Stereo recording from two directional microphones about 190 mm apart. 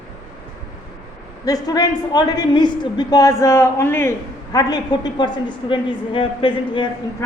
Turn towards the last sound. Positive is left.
turn(degrees=25)  # may be behind; listen again after turning